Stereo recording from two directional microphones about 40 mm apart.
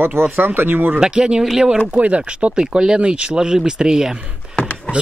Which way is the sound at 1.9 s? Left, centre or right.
Right.